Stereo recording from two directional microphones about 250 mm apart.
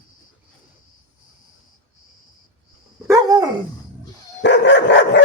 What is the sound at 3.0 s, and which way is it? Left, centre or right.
Dog, centre.